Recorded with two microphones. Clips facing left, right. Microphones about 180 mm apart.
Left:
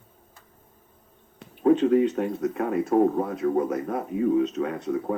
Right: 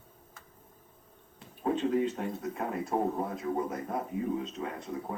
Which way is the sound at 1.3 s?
70° left (ahead or behind).